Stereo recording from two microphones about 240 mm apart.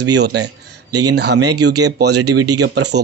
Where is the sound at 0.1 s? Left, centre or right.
Right.